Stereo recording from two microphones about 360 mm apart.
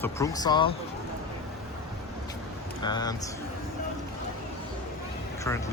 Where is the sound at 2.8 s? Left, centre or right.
Centre.